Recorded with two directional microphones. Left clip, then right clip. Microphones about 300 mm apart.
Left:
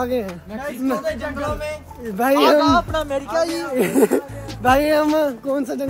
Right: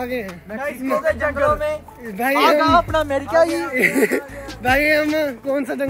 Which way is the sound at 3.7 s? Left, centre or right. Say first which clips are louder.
Left 1 dB; centre.